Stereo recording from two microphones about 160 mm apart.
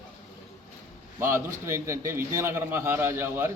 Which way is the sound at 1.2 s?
20° right (ahead or behind).